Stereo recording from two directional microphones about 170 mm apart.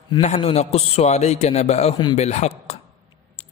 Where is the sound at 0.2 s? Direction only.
40° left (ahead or behind).